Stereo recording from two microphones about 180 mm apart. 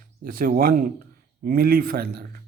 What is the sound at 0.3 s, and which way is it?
Speech, 55° right (ahead or behind).